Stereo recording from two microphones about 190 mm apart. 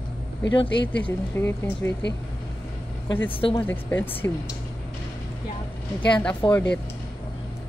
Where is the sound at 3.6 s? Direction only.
10° left (ahead or behind).